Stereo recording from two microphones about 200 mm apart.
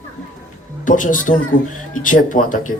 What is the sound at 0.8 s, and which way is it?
Speech, 40° left (ahead or behind).